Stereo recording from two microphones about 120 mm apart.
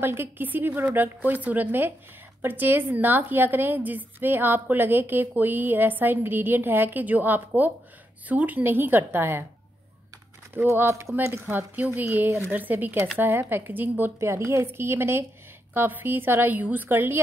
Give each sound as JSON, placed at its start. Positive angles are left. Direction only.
{"t": 0.0, "sound": "a woman's voice", "side_deg": -20}
{"t": 10.5, "sound": "a woman's voice", "side_deg": -20}